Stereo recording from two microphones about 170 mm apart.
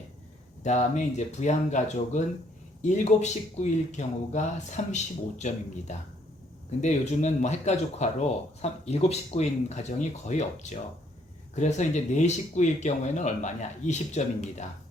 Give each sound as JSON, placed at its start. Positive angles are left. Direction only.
{"t": 0.6, "sound": "speech", "side_deg": 45}